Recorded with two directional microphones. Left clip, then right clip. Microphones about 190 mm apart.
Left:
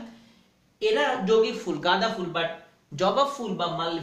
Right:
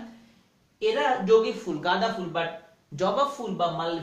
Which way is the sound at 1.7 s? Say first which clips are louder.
Left 1 dB; 20° left (ahead or behind).